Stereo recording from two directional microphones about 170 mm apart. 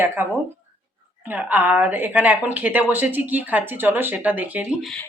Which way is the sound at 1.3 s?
10° right (ahead or behind).